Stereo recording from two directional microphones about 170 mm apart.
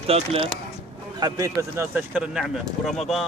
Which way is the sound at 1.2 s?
20° right (ahead or behind).